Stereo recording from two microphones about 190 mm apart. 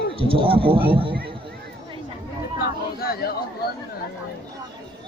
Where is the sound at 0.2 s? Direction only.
30° right (ahead or behind).